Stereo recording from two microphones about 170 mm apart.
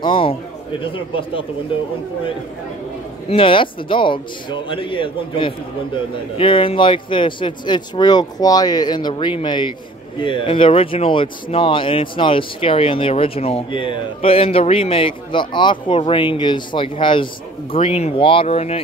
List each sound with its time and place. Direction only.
0.0 s a man's voice: 30° left (ahead or behind)
3.3 s speech: 30° left (ahead or behind)